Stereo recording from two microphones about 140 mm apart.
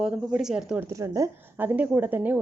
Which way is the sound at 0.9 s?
20° right (ahead or behind).